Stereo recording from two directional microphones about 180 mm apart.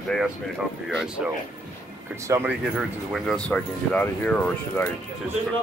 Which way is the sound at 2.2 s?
15° right (ahead or behind).